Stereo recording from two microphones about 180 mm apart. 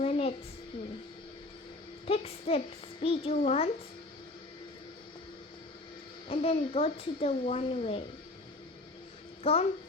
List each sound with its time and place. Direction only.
0.0 s a sound: 35° left (ahead or behind)
2.0 s a child's voice: 35° left (ahead or behind)
6.2 s speech: 35° left (ahead or behind)
9.4 s a woman's voice: 35° left (ahead or behind)